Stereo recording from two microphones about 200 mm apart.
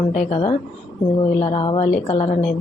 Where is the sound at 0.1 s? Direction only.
35° left (ahead or behind).